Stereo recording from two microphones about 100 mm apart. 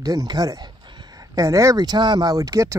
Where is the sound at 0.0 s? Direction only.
40° right (ahead or behind).